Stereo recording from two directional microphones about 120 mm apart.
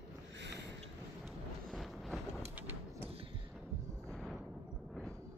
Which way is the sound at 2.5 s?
15° right (ahead or behind).